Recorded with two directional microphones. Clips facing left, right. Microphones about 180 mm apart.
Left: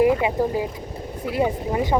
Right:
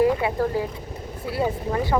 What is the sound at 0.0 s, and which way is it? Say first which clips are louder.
Speech: left 2 dB; 15° left (ahead or behind).